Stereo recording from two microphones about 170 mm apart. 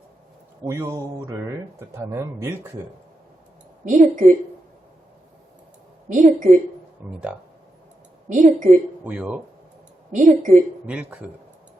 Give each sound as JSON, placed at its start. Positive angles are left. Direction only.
{"t": 0.6, "sound": "speech", "side_deg": -15}
{"t": 3.8, "sound": "a woman's voice", "side_deg": -50}
{"t": 6.1, "sound": "a woman's voice", "side_deg": -45}
{"t": 8.3, "sound": "a woman's voice", "side_deg": -45}
{"t": 9.0, "sound": "speech", "side_deg": -10}
{"t": 10.1, "sound": "a woman's voice", "side_deg": -45}
{"t": 10.8, "sound": "speech", "side_deg": -5}